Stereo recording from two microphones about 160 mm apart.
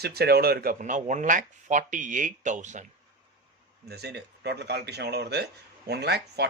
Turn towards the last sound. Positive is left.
turn(degrees=-90)